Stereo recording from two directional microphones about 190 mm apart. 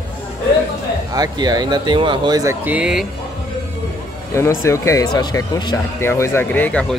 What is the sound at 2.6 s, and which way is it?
Speech, 5° right (ahead or behind).